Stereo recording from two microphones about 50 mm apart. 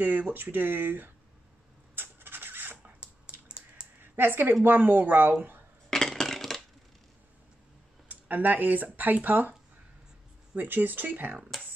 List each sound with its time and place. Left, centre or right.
0.0 s speech: right
2.0 s rub: right
3.4 s a sound: right
4.0 s speech: right
5.9 s a sound: centre
8.1 s speech: right
10.5 s speech: right